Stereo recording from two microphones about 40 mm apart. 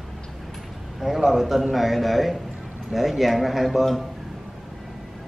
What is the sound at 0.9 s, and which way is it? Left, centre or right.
A man's voice, centre.